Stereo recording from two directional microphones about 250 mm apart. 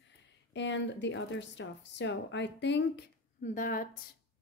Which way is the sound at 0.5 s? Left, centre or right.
Left.